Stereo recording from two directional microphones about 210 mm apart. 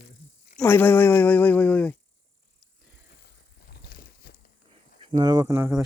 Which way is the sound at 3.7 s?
50° left (ahead or behind).